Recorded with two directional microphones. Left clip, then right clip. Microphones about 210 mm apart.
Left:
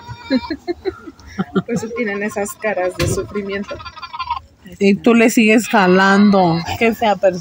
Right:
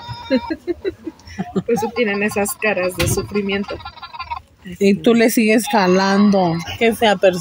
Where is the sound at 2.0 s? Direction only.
60° right (ahead or behind).